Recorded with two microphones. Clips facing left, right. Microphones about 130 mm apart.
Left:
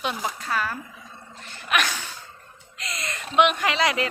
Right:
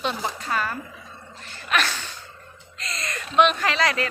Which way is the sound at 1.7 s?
10° left (ahead or behind).